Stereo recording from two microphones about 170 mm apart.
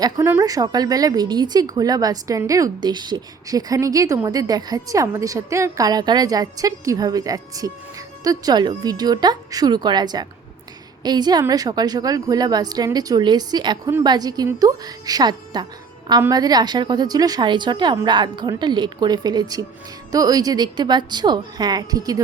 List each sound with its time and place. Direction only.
0.0 s a woman's voice: 15° right (ahead or behind)